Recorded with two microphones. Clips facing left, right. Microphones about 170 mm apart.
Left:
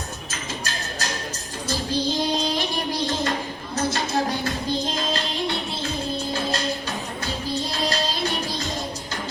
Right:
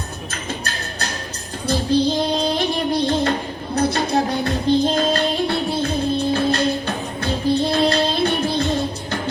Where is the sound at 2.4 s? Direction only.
55° right (ahead or behind).